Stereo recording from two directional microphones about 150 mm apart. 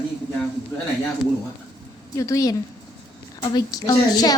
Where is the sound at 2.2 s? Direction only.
20° left (ahead or behind).